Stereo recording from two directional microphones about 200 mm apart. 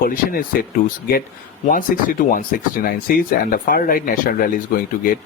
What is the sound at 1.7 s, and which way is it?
Speech, 45° left (ahead or behind).